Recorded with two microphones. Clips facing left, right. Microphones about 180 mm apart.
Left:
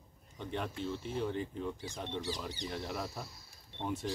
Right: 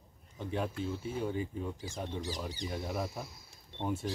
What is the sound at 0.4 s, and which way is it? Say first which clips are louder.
Speech: right 3 dB; 5° right (ahead or behind).